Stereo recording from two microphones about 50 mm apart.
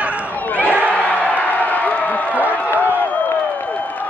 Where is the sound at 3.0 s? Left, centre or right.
Left.